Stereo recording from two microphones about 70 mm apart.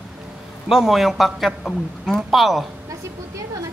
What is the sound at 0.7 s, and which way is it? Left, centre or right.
Speech, centre.